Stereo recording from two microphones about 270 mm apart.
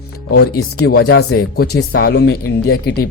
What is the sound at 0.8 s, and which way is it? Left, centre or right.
A man's voice, left.